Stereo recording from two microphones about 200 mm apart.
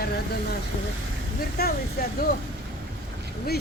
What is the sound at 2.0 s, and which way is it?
Speech, 45° left (ahead or behind).